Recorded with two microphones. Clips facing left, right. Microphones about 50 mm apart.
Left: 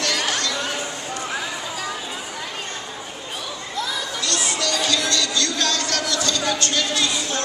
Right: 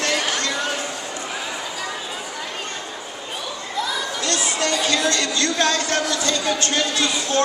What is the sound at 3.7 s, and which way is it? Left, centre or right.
Chatter, centre.